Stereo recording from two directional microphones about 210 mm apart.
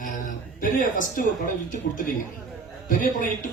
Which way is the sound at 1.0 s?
40° left (ahead or behind).